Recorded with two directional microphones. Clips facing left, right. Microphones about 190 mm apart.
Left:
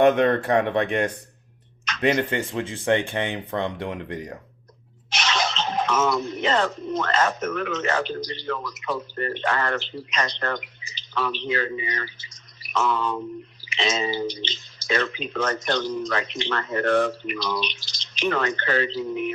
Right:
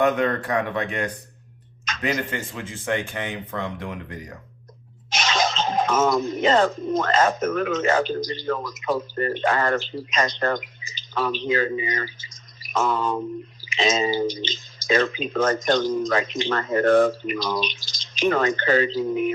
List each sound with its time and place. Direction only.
0.0 s speech: 30° left (ahead or behind)
5.2 s speech: 45° right (ahead or behind)